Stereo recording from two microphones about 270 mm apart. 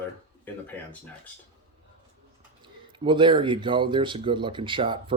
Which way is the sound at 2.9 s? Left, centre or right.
Centre.